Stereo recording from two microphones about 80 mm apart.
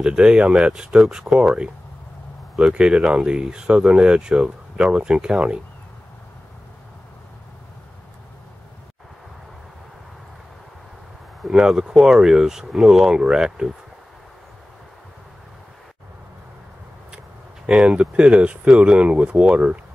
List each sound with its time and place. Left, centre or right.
0.0 s speech: centre
11.4 s speech: centre
17.6 s speech: centre